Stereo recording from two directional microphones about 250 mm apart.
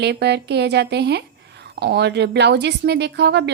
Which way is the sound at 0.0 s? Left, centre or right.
Right.